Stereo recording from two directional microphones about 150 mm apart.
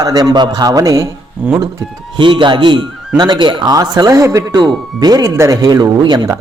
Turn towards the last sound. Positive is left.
turn(degrees=-30)  # may be behind; listen again after turning